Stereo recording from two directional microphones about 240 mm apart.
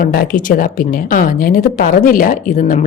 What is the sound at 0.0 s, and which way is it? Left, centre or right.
A woman's voice, left.